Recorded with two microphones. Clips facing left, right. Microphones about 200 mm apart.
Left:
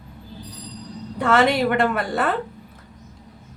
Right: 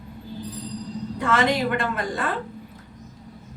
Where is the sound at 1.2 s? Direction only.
65° left (ahead or behind).